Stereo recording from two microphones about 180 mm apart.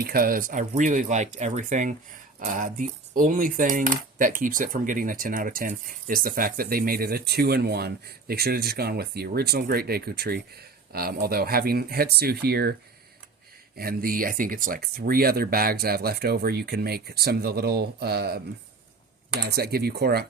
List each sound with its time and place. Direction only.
0.0 s speech: 55° right (ahead or behind)
2.4 s cutlery: 45° right (ahead or behind)
13.7 s cutlery: 55° right (ahead or behind)
19.5 s cutlery: 60° right (ahead or behind)